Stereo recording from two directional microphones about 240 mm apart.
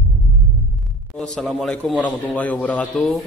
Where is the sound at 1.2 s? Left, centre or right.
Centre.